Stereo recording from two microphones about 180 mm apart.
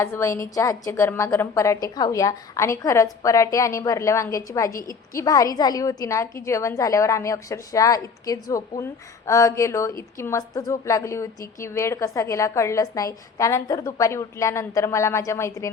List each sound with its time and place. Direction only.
0.0 s a woman's voice: 15° left (ahead or behind)